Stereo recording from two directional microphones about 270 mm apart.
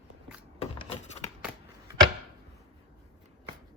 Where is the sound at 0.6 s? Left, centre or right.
Left.